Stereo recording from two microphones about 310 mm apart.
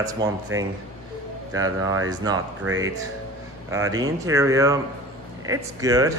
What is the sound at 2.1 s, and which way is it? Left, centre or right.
Speech, centre.